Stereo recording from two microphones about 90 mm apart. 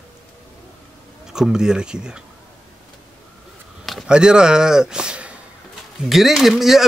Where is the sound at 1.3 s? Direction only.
5° right (ahead or behind).